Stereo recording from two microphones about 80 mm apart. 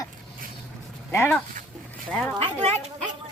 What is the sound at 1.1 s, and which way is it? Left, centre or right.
Speech, left.